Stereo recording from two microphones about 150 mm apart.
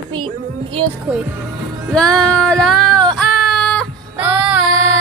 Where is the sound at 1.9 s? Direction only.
5° left (ahead or behind).